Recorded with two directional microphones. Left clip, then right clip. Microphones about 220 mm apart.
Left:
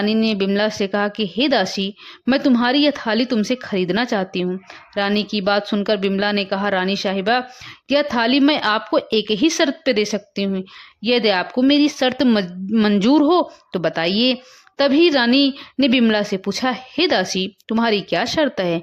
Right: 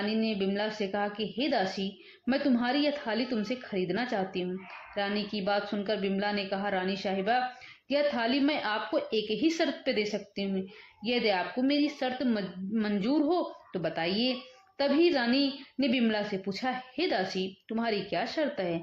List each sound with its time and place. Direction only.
0.0 s a woman's voice: 50° left (ahead or behind)